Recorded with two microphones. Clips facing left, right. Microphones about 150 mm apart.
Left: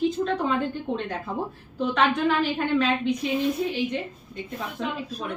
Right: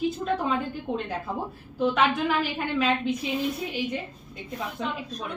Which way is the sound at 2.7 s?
5° right (ahead or behind).